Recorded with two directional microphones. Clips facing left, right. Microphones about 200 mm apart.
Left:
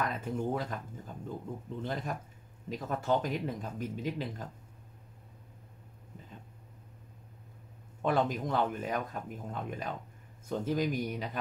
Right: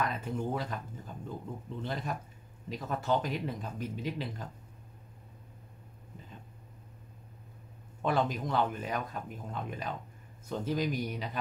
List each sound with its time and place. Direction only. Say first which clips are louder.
0.0 s speech: even; 45° left (ahead or behind)
8.0 s speech: left 1 dB; 50° left (ahead or behind)